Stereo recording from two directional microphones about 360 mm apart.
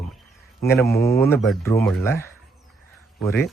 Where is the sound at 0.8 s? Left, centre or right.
Left.